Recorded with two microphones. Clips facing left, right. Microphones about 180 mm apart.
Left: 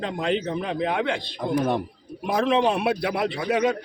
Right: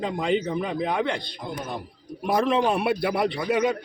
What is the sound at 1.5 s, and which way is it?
Speech, 60° left (ahead or behind).